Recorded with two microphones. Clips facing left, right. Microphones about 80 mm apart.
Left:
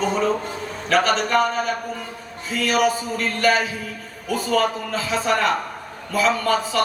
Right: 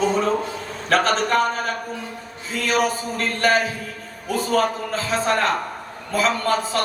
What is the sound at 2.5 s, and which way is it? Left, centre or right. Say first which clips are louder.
Speech: left 2 dB; right.